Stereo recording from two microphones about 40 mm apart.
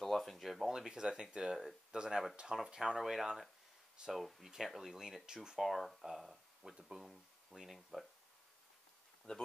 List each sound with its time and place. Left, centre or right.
0.0 s speech: centre
0.7 s speech: centre
3.0 s speech: centre
5.6 s speech: centre
9.3 s speech: left